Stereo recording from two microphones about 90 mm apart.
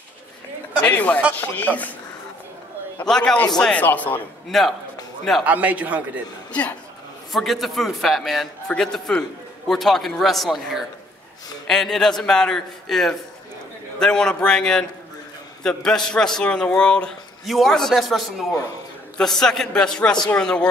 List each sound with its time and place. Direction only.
0.8 s a man's voice: 15° left (ahead or behind)
3.1 s a man's voice: 5° left (ahead or behind)
3.8 s speech: 20° left (ahead or behind)
4.5 s a man's voice: centre (ahead or behind)
5.4 s a man's voice: 15° right (ahead or behind)
7.3 s a man's voice: centre (ahead or behind)